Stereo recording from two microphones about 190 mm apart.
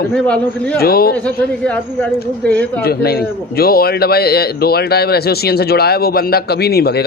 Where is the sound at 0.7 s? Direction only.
55° left (ahead or behind).